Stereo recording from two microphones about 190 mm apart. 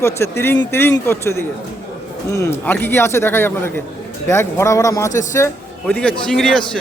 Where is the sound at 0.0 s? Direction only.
15° left (ahead or behind).